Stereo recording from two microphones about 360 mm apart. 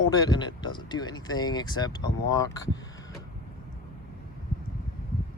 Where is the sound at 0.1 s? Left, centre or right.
Centre.